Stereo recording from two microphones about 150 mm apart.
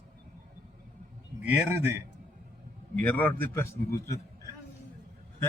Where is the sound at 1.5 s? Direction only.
15° right (ahead or behind).